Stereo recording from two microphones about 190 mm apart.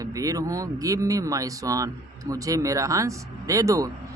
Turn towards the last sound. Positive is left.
turn(degrees=-15)  # may be behind; listen again after turning